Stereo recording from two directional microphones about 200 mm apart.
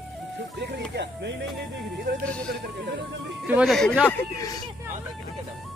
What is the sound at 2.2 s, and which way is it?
Speech, 5° left (ahead or behind).